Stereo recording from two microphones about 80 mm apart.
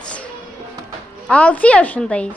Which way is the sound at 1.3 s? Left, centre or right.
Centre.